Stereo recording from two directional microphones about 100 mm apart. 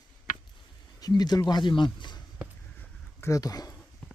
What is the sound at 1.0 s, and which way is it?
Speech, 40° left (ahead or behind).